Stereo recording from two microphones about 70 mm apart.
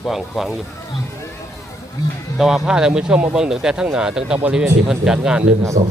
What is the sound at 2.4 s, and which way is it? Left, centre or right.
Speech, centre.